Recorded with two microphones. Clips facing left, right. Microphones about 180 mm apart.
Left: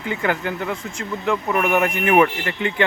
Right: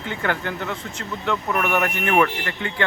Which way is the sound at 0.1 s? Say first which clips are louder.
Left 3 dB; 10° left (ahead or behind).